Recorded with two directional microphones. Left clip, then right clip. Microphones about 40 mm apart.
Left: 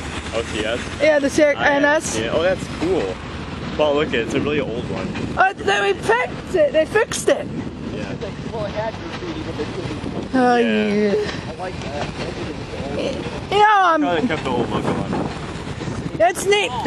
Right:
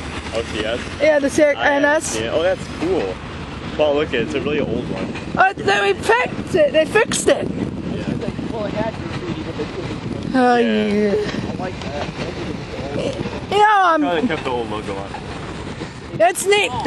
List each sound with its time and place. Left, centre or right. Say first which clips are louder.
0.3 s speech: even; centre
1.0 s speech: right 1 dB; right
3.8 s speech: right 1 dB; centre
5.3 s speech: right 2 dB; right
8.5 s speech: right 1 dB; right
10.3 s speech: right 1 dB; right
10.7 s speech: right 1 dB; centre
12.9 s speech: right 1 dB; right
14.0 s speech: even; centre
16.2 s speech: right 1 dB; right